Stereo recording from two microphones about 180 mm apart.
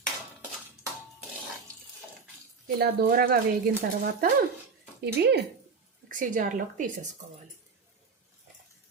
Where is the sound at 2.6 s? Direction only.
55° right (ahead or behind).